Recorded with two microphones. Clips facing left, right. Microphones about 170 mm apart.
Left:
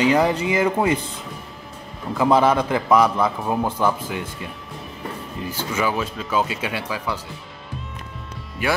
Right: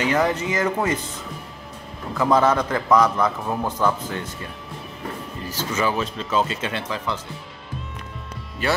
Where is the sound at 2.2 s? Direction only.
10° left (ahead or behind).